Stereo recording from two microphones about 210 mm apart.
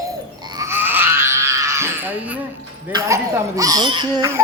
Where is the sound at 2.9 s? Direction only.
15° right (ahead or behind).